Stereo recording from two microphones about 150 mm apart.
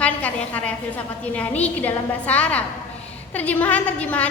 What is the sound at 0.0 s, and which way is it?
A woman's voice, 10° left (ahead or behind).